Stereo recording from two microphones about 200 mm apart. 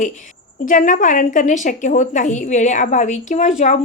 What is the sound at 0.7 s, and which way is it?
A woman's voice, 40° left (ahead or behind).